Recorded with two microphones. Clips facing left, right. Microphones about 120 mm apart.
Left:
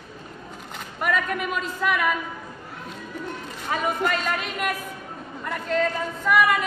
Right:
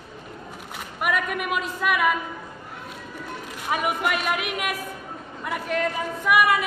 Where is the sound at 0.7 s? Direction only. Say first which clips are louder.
Even; 10° right (ahead or behind).